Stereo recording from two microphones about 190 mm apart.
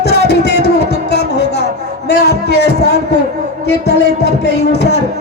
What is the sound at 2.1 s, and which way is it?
Speech, 60° left (ahead or behind).